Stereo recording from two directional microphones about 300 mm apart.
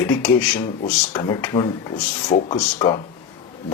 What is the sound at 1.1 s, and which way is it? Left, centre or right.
Speech, centre.